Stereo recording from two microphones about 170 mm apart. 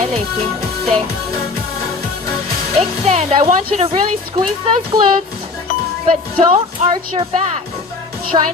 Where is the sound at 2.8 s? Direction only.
35° right (ahead or behind).